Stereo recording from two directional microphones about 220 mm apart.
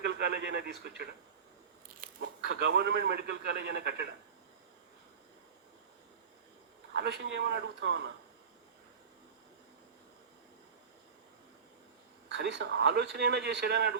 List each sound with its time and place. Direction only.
0.0 s speech: 50° right (ahead or behind)
2.2 s a man's voice: 55° right (ahead or behind)
6.9 s a man's voice: 50° right (ahead or behind)
12.3 s a man's voice: 55° right (ahead or behind)